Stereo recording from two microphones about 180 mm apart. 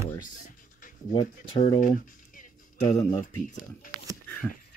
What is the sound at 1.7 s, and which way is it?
Speech, 45° left (ahead or behind).